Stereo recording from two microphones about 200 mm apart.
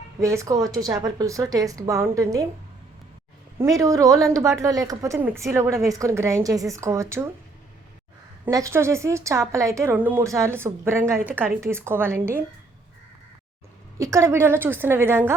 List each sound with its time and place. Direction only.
0.2 s a woman's voice: 15° right (ahead or behind)
3.6 s a woman's voice: 15° right (ahead or behind)
8.4 s a woman's voice: 15° right (ahead or behind)
14.0 s a woman's voice: 15° right (ahead or behind)